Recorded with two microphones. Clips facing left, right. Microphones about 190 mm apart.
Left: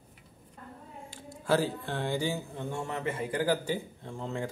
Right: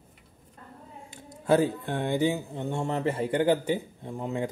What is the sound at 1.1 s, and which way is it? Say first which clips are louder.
Speech: right 5 dB; 20° right (ahead or behind).